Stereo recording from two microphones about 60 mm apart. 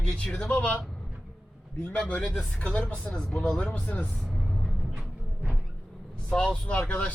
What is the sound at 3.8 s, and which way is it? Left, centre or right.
Speech, left.